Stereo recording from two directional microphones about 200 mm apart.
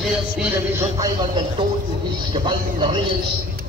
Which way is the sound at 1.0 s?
20° right (ahead or behind).